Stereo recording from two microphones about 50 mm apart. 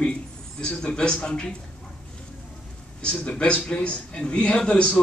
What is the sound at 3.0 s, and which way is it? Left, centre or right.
A man's voice, centre.